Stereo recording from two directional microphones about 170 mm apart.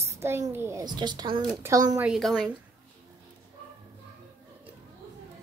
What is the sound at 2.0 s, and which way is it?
Speech, centre (ahead or behind).